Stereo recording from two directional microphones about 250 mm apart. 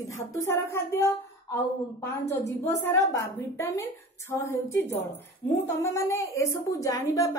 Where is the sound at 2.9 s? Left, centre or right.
Centre.